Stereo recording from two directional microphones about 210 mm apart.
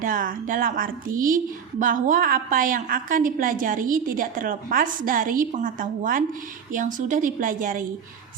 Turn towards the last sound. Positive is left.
turn(degrees=-40)  # may be behind; listen again after turning